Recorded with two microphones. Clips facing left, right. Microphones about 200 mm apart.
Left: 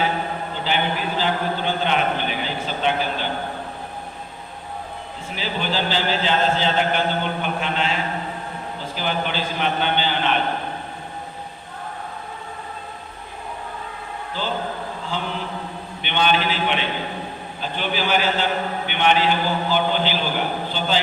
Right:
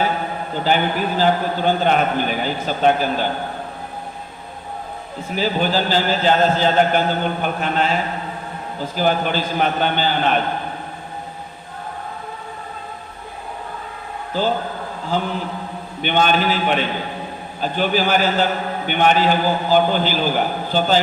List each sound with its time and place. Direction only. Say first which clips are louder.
0.5 s a man's voice: right 6 dB; 45° right (ahead or behind)
5.3 s a man's voice: right 6 dB; 45° right (ahead or behind)
14.4 s a man's voice: right 8 dB; 45° right (ahead or behind)
16.0 s a man's voice: right 4 dB; 45° right (ahead or behind)